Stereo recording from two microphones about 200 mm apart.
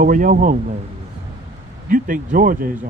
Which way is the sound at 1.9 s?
45° right (ahead or behind).